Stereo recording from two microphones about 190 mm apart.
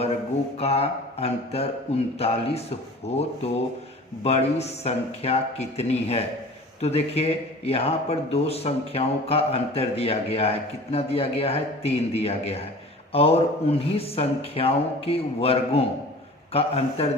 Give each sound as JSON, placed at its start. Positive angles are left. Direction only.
{"t": 0.6, "sound": "a man's voice", "side_deg": 30}